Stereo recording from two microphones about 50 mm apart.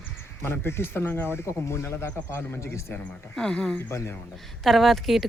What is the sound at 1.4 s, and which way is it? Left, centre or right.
A man's voice, left.